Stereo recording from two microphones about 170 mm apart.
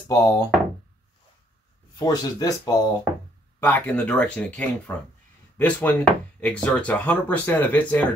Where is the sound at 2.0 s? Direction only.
20° left (ahead or behind).